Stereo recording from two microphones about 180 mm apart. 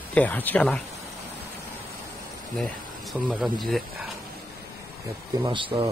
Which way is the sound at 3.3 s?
Centre (ahead or behind).